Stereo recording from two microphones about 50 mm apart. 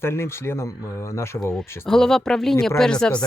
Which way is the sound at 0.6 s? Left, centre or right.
Left.